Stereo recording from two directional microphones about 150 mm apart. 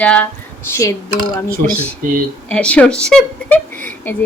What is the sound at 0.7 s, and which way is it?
Speech, 20° left (ahead or behind).